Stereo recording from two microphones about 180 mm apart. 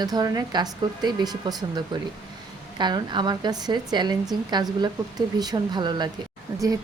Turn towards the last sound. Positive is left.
turn(degrees=-20)  # may be behind; listen again after turning